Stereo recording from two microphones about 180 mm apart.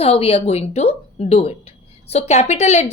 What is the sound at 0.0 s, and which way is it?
A woman's voice, 35° left (ahead or behind).